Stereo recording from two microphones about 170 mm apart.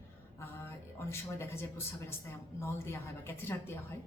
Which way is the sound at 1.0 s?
15° left (ahead or behind).